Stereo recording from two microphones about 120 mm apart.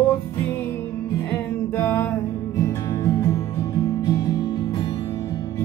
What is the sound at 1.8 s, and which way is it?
Music, 20° left (ahead or behind).